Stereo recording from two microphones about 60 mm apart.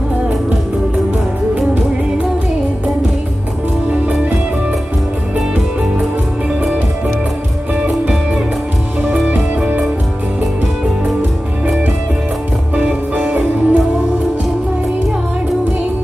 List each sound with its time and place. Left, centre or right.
3.9 s music: centre
12.7 s music: right